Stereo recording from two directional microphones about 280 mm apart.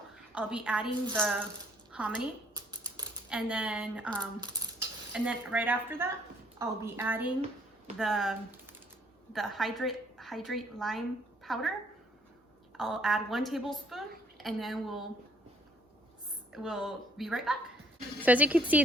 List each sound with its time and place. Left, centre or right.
0.1 s a sound: centre
1.1 s a woman's voice: centre
4.2 s coin: centre
5.1 s a woman's voice: centre
12.7 s a woman's voice: centre
16.5 s a woman's voice: centre